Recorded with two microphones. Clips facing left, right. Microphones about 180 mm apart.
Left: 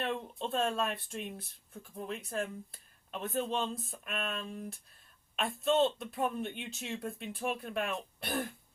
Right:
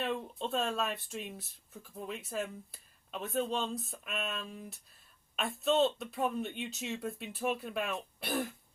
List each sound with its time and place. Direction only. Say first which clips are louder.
0.0 s speech: even; centre (ahead or behind)